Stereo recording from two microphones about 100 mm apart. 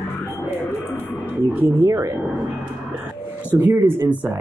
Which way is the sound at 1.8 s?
30° right (ahead or behind).